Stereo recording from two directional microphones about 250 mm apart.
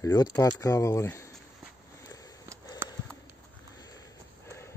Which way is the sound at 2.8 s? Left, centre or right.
Centre.